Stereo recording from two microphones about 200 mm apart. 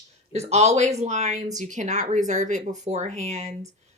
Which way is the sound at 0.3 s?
35° right (ahead or behind).